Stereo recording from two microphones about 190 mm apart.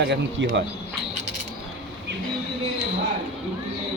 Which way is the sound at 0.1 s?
65° right (ahead or behind).